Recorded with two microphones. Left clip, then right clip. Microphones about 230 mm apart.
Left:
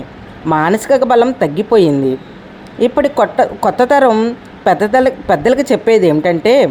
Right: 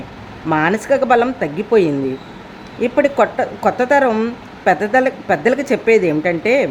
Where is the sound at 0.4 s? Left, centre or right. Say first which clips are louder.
Left 3 dB; centre.